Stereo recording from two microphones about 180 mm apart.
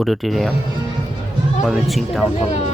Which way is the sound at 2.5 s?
35° left (ahead or behind).